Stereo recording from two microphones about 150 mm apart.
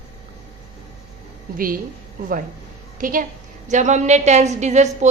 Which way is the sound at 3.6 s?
55° right (ahead or behind).